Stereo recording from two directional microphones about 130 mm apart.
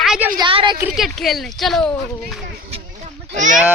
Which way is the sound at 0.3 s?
40° right (ahead or behind).